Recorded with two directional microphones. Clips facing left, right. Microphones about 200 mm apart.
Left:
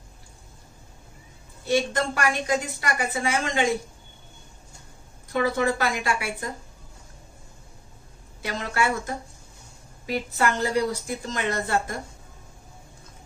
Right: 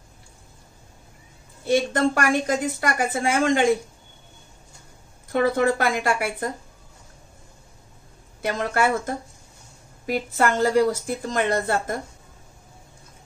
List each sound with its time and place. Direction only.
1.7 s a woman's voice: 50° right (ahead or behind)
5.3 s a woman's voice: 50° right (ahead or behind)
8.4 s a woman's voice: 50° right (ahead or behind)